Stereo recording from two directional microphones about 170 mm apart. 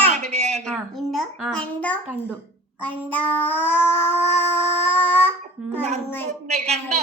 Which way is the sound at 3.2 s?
10° left (ahead or behind).